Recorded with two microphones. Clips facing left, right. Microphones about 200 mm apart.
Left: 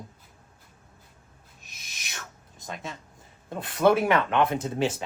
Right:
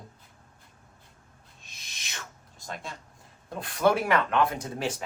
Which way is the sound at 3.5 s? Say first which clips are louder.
Left 3 dB; 25° left (ahead or behind).